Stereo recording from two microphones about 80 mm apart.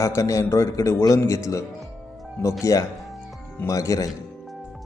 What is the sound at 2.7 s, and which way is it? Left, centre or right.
Speech, left.